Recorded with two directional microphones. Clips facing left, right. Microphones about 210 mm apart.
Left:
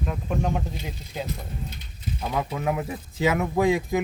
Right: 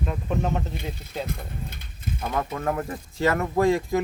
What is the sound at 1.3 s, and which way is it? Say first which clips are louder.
Speech: even; 50° right (ahead or behind).